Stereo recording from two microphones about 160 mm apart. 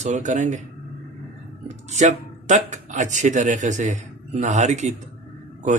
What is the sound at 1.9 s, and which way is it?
Speech, 45° right (ahead or behind).